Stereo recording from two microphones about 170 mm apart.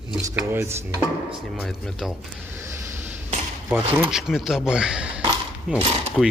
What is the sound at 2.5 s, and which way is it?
Vehicle, 15° right (ahead or behind).